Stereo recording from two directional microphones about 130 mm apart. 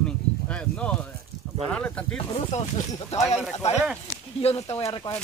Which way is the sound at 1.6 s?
10° left (ahead or behind).